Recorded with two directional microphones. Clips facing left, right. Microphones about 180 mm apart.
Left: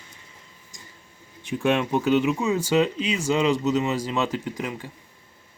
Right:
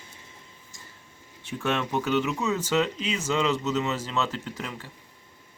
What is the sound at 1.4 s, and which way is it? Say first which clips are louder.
Speech: left 5 dB; 15° left (ahead or behind).